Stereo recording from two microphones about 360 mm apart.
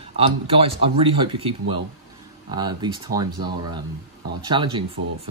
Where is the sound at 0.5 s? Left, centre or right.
Centre.